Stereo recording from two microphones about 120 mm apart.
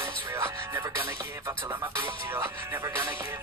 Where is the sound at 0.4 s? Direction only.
25° right (ahead or behind).